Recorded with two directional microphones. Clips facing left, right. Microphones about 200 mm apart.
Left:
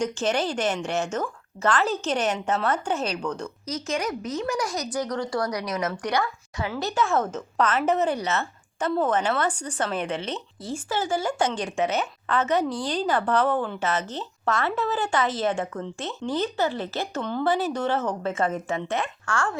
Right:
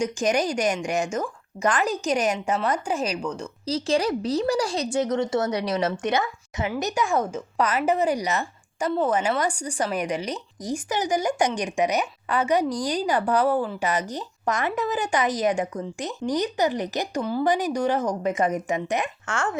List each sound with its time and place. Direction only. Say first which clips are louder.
0.0 s a woman's voice: right 2 dB; 15° right (ahead or behind)
3.7 s a woman's voice: right 6 dB; 30° right (ahead or behind)